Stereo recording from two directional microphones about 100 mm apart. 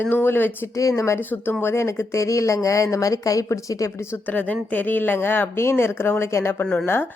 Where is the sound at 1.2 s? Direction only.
20° left (ahead or behind).